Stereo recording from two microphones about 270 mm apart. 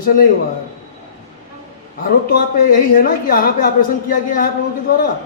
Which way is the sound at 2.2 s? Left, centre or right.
Left.